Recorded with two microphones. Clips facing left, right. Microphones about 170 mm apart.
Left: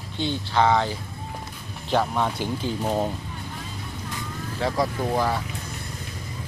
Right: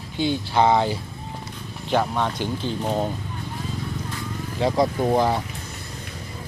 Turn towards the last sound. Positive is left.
turn(degrees=-20)  # may be behind; listen again after turning